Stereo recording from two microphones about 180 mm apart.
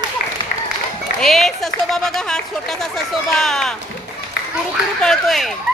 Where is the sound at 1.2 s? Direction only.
Centre (ahead or behind).